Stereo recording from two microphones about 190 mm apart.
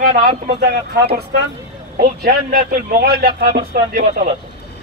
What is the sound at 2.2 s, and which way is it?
Speech, 55° right (ahead or behind).